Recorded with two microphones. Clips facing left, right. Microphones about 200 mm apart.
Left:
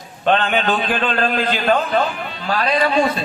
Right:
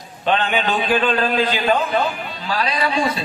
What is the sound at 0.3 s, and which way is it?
A man's voice, 50° left (ahead or behind).